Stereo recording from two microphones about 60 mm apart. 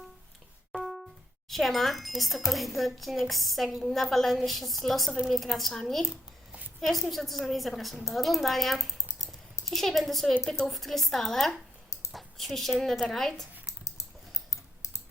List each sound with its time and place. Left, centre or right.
0.7 s music: centre
1.5 s a woman's voice: centre
12.1 s a sound: centre
12.8 s a woman's voice: centre
14.5 s typing: left